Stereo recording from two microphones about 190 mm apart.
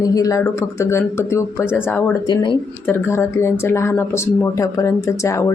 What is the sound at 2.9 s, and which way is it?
Speech, 10° left (ahead or behind).